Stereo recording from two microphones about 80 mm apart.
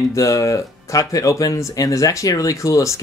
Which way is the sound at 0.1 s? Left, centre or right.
Left.